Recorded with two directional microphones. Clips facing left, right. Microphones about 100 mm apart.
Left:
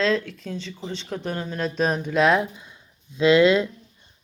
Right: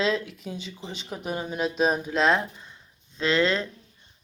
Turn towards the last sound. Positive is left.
turn(degrees=15)  # may be behind; listen again after turning